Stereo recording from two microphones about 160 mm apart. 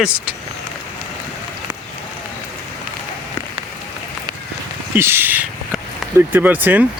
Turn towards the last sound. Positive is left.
turn(degrees=-10)  # may be behind; listen again after turning